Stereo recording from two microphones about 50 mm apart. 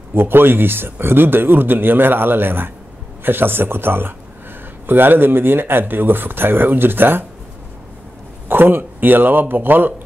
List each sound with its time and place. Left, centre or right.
0.1 s a man's voice: right
8.5 s a man's voice: right